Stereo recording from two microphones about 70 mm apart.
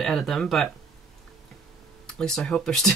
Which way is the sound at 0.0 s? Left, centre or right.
Centre.